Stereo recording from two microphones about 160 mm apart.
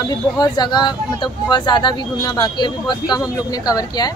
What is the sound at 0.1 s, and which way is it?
Speech, 25° left (ahead or behind).